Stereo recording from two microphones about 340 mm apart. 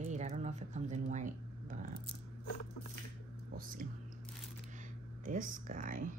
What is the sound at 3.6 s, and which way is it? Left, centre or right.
Speech, right.